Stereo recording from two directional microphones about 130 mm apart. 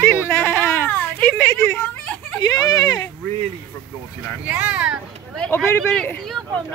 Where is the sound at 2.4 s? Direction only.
30° left (ahead or behind).